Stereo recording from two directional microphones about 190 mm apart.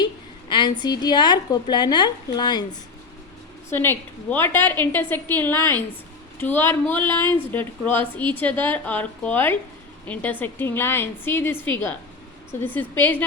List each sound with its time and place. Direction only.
0.0 s a sound: 25° left (ahead or behind)
0.8 s a woman's voice: 20° left (ahead or behind)
3.7 s a woman's voice: 10° left (ahead or behind)